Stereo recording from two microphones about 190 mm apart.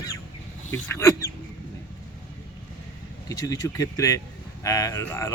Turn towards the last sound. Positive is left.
turn(degrees=15)  # may be behind; listen again after turning